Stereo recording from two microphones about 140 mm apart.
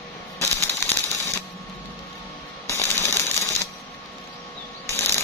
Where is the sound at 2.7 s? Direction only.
20° left (ahead or behind).